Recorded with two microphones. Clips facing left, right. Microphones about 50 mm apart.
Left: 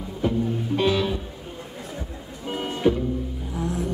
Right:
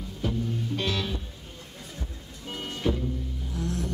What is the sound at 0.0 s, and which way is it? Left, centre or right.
Music, left.